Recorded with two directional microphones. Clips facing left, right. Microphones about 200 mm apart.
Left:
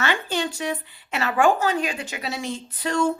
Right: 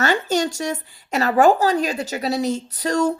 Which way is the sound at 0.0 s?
40° right (ahead or behind).